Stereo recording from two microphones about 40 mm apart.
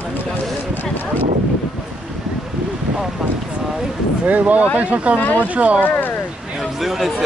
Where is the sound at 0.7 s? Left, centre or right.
Left.